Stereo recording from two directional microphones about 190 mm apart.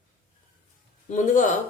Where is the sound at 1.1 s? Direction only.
40° left (ahead or behind).